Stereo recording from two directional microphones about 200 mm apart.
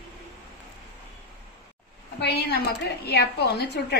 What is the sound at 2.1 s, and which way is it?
A woman's voice, 55° left (ahead or behind).